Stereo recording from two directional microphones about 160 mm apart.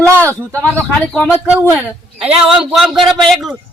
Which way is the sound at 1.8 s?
5° right (ahead or behind).